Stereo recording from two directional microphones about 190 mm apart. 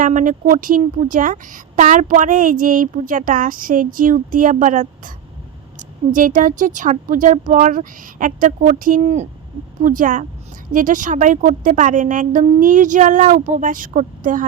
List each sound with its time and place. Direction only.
0.0 s speech: 45° right (ahead or behind)
6.1 s speech: 45° right (ahead or behind)